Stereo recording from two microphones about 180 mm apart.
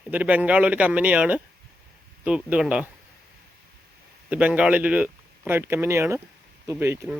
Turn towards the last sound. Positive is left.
turn(degrees=-10)  # may be behind; listen again after turning